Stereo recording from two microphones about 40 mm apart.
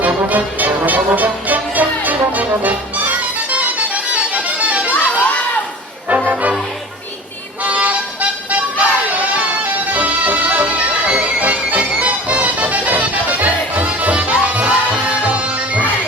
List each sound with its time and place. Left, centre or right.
0.0 s music: right
6.2 s music: right
7.6 s music: right
9.9 s music: right